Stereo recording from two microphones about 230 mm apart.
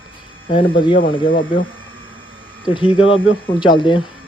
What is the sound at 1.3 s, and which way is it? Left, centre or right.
Speech, left.